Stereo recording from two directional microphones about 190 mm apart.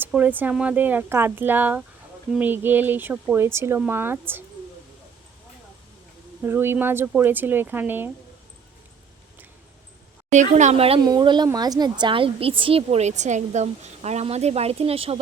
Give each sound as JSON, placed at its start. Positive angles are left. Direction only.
{"t": 0.0, "sound": "speech", "side_deg": -10}
{"t": 6.4, "sound": "speech", "side_deg": -10}
{"t": 10.3, "sound": "a woman's voice", "side_deg": -40}